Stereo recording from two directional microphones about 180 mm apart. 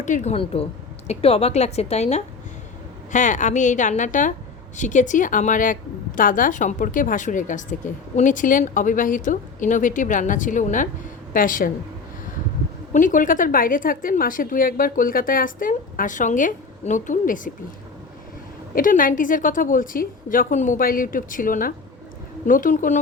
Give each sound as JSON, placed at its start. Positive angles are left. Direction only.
{"t": 0.0, "sound": "a woman's voice", "side_deg": 40}
{"t": 12.9, "sound": "a woman's voice", "side_deg": 45}
{"t": 18.7, "sound": "a woman's voice", "side_deg": 50}